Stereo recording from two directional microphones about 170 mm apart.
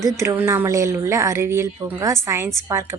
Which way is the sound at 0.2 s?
15° right (ahead or behind).